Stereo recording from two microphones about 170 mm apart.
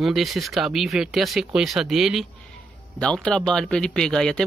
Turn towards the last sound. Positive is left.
turn(degrees=5)  # may be behind; listen again after turning